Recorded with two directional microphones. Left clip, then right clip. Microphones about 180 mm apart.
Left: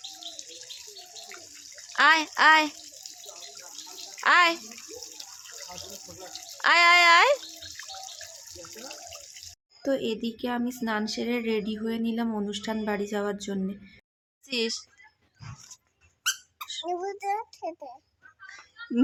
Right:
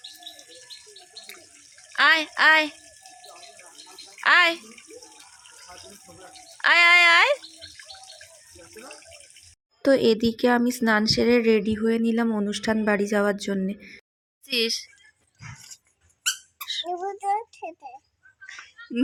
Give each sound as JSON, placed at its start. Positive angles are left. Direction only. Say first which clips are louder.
{"t": 2.0, "sound": "speech", "louder": "right 1 dB", "side_deg": 15}
{"t": 4.1, "sound": "a child's voice", "louder": "right 2 dB", "side_deg": 15}
{"t": 6.6, "sound": "speech", "louder": "right 3 dB", "side_deg": 15}
{"t": 9.8, "sound": "speech", "louder": "right 9 dB", "side_deg": -35}
{"t": 14.4, "sound": "a child's voice", "louder": "right 5 dB", "side_deg": 5}
{"t": 16.6, "sound": "a sound", "louder": "right 3 dB", "side_deg": 10}
{"t": 17.2, "sound": "child singing", "louder": "right 4 dB", "side_deg": 15}